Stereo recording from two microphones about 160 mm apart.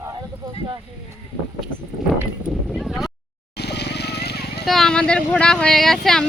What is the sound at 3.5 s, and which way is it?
Vehicle, 90° left.